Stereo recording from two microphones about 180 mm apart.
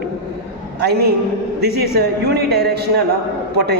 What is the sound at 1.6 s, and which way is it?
A man's voice, 65° right (ahead or behind).